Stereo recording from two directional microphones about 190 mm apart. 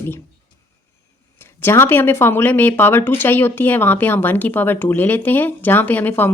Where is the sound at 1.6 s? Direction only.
10° left (ahead or behind).